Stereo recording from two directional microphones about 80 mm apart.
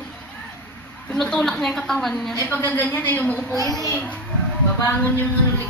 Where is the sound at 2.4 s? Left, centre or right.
Left.